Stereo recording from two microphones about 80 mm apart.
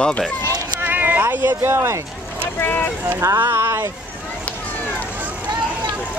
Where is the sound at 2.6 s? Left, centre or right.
Left.